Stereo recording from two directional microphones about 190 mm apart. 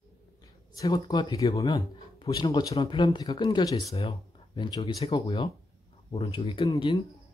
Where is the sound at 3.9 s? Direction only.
30° left (ahead or behind).